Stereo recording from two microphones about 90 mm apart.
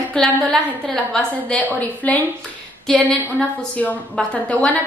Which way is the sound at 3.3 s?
15° left (ahead or behind).